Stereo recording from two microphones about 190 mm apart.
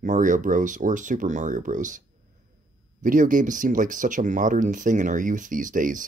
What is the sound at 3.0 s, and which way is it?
Speech, 45° right (ahead or behind).